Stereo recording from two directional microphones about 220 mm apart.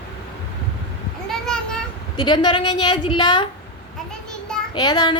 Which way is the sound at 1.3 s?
5° left (ahead or behind).